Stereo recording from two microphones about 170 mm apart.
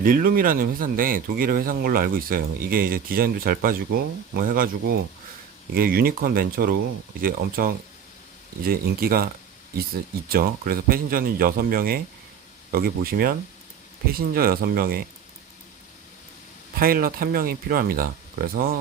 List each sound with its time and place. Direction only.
0.0 s speech: 55° right (ahead or behind)
16.7 s speech: 60° right (ahead or behind)